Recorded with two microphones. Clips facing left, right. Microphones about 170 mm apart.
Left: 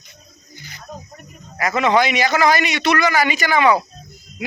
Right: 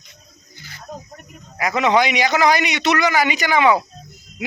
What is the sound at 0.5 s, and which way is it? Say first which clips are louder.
Snake: left 2 dB; 20° left (ahead or behind).